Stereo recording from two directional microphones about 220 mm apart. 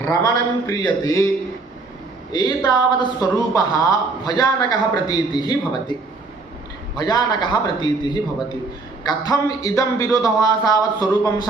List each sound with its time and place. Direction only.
0.0 s a man's voice: 15° left (ahead or behind)
2.3 s a woman's voice: 20° left (ahead or behind)
6.9 s a man's voice: 20° left (ahead or behind)